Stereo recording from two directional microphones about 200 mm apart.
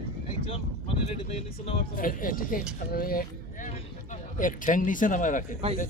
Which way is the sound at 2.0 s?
45° left (ahead or behind).